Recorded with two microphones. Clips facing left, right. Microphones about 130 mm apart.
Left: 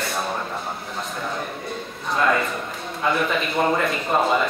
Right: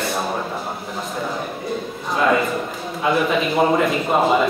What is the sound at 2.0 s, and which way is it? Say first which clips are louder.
A man's voice: right 3 dB; centre (ahead or behind).